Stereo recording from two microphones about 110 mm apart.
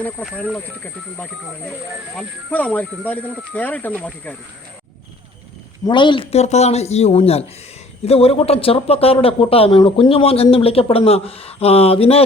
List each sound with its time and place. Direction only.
2.5 s speech: 15° left (ahead or behind)
5.8 s a woman's voice: 45° left (ahead or behind)
6.3 s speech: 80° left; by 12.2 s 60° left (ahead or behind)